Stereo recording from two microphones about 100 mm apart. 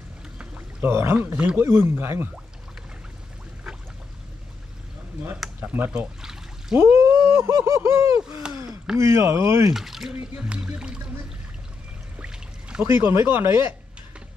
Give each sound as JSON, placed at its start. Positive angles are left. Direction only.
{"t": 0.4, "sound": "pour", "side_deg": -10}
{"t": 0.8, "sound": "speech", "side_deg": -25}
{"t": 1.6, "sound": "speech", "side_deg": -25}
{"t": 5.6, "sound": "speech", "side_deg": -20}
{"t": 8.2, "sound": "speech", "side_deg": -10}
{"t": 8.9, "sound": "speech", "side_deg": -25}
{"t": 9.8, "sound": "speech", "side_deg": -5}
{"t": 12.2, "sound": "pour", "side_deg": -10}
{"t": 12.8, "sound": "speech", "side_deg": -25}